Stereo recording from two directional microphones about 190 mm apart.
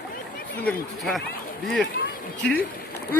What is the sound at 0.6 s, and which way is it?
Speech, centre (ahead or behind).